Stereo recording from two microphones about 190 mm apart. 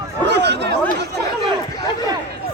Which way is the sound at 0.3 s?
65° right (ahead or behind).